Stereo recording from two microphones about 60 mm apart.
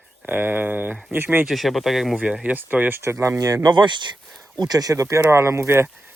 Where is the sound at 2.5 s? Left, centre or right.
Right.